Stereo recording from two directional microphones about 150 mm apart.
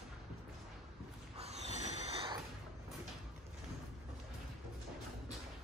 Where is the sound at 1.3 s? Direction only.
45° right (ahead or behind).